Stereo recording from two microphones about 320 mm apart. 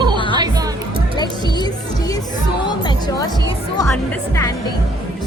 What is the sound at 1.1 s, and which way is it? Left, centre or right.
Speech, centre.